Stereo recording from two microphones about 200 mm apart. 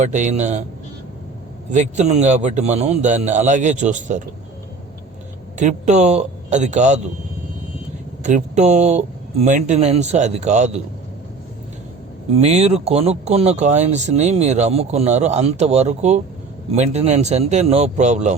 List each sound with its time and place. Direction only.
0.0 s speech: 35° right (ahead or behind)
1.7 s speech: 35° right (ahead or behind)
5.5 s speech: 35° right (ahead or behind)
8.2 s speech: 35° right (ahead or behind)
12.4 s speech: 30° right (ahead or behind)